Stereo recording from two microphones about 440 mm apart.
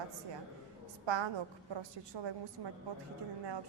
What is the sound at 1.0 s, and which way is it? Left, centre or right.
Speech, right.